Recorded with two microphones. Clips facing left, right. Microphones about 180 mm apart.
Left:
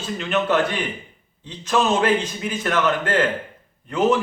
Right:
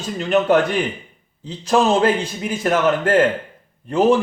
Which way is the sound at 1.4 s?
40° right (ahead or behind).